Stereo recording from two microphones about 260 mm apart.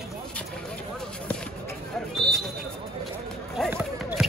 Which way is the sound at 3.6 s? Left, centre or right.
Centre.